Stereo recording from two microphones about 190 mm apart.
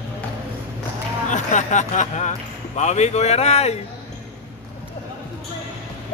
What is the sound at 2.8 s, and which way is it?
Speech, 35° left (ahead or behind).